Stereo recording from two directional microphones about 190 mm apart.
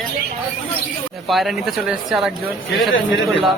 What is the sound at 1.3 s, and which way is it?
Speech, centre (ahead or behind).